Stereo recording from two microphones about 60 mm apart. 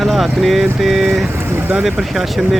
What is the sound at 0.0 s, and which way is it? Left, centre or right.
Speech, centre.